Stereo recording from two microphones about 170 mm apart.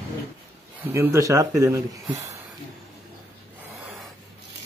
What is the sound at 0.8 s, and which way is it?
Speech, 15° right (ahead or behind).